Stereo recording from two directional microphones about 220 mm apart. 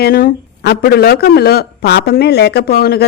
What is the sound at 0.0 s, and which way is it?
Speech, 40° left (ahead or behind).